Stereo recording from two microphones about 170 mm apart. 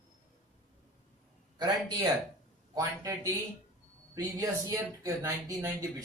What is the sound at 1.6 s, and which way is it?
A man's voice, 25° right (ahead or behind).